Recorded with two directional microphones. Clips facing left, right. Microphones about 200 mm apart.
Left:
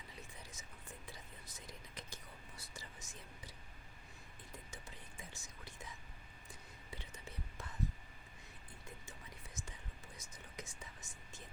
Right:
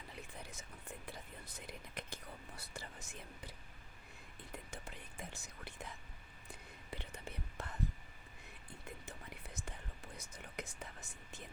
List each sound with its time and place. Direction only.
0.2 s whispering: 60° right (ahead or behind)
4.5 s whispering: 60° right (ahead or behind)
9.0 s whispering: 60° right (ahead or behind)